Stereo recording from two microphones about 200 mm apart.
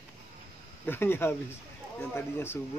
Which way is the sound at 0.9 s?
10° left (ahead or behind).